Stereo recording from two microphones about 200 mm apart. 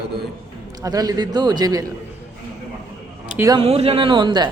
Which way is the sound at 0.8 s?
20° right (ahead or behind).